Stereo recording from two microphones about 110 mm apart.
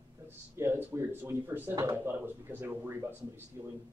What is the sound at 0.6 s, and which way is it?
Speech, 20° right (ahead or behind).